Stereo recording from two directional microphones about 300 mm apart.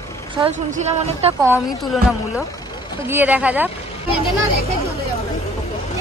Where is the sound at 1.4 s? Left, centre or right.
Centre.